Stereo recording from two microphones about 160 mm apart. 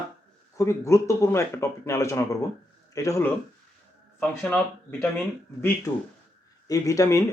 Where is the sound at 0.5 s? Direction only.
20° left (ahead or behind).